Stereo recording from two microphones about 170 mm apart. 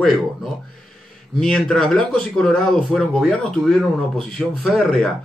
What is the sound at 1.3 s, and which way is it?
A man's voice, 5° left (ahead or behind).